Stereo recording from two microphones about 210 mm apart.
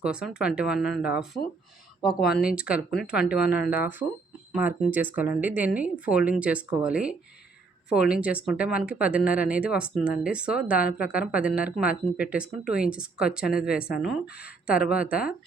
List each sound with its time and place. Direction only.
0.0 s speech: 5° right (ahead or behind)
3.4 s speech: 50° left (ahead or behind)
3.7 s speech: 10° right (ahead or behind)
13.7 s speech: 45° left (ahead or behind)
14.0 s speech: 5° right (ahead or behind)